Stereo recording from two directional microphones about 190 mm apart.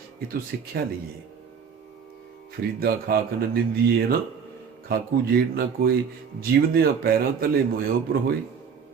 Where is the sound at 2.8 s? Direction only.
50° right (ahead or behind).